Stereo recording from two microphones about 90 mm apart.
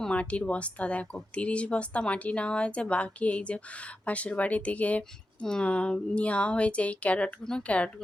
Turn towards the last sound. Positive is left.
turn(degrees=10)  # may be behind; listen again after turning